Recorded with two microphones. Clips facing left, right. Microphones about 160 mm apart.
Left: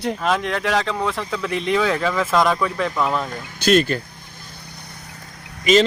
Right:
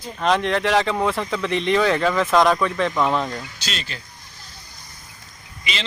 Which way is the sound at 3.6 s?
55° left (ahead or behind).